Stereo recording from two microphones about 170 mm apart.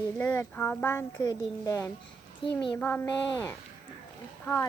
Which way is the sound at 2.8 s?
10° left (ahead or behind).